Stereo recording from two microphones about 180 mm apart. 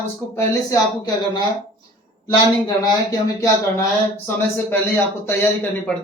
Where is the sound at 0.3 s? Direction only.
20° left (ahead or behind).